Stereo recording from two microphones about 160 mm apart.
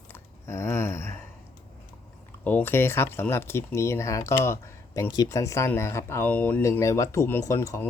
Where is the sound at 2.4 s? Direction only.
10° left (ahead or behind).